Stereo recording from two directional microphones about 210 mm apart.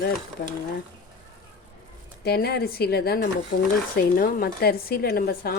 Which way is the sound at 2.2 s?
50° left (ahead or behind).